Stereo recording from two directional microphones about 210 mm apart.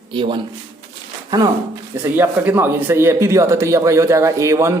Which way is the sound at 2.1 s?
10° right (ahead or behind).